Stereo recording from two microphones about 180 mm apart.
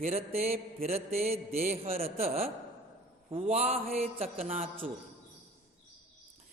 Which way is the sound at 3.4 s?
35° right (ahead or behind).